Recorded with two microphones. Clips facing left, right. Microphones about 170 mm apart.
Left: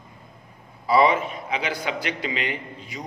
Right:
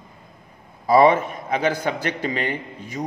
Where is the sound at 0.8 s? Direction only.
45° right (ahead or behind).